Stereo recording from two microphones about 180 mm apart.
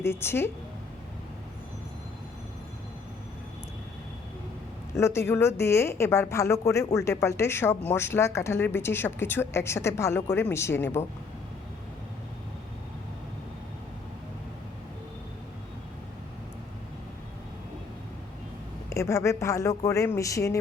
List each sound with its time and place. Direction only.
0.0 s a woman's voice: 15° left (ahead or behind)
4.9 s a woman's voice: 15° left (ahead or behind)
18.9 s a woman's voice: 15° left (ahead or behind)